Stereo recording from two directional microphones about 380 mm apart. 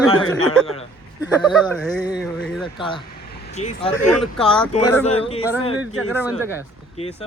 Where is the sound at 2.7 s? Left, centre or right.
Centre.